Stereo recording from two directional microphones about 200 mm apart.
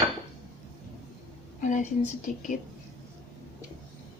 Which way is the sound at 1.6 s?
35° left (ahead or behind).